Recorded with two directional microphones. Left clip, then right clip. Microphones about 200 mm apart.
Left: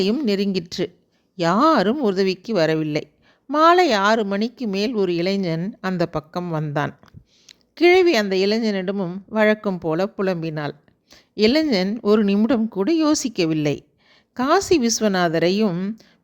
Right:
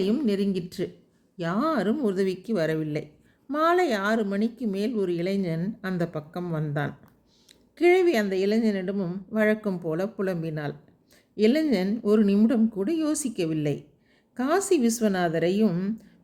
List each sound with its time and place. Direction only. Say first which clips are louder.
0.0 s a woman's voice: left 5 dB; 45° left (ahead or behind)